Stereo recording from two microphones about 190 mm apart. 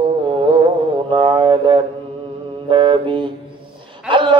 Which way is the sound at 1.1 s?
25° right (ahead or behind).